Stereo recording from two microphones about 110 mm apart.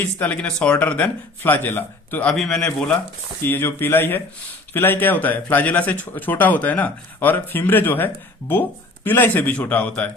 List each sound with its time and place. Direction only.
0.0 s speech: 15° left (ahead or behind)
2.3 s a man's voice: 5° left (ahead or behind)
2.6 s speech: 15° left (ahead or behind)